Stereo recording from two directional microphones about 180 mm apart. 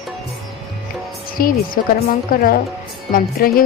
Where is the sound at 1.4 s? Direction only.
55° left (ahead or behind).